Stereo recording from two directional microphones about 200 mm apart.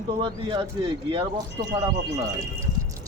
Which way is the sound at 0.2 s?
25° right (ahead or behind).